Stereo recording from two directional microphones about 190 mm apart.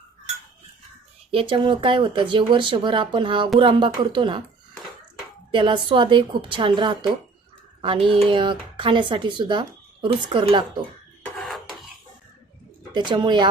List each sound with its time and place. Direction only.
1.3 s speech: 30° right (ahead or behind)
5.5 s speech: 25° right (ahead or behind)
11.4 s a sound: centre (ahead or behind)
12.9 s speech: 25° right (ahead or behind)